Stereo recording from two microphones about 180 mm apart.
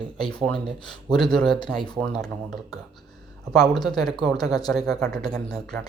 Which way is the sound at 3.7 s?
25° left (ahead or behind).